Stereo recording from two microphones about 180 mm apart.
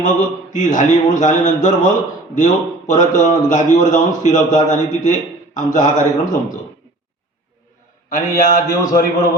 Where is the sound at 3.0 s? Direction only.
45° left (ahead or behind).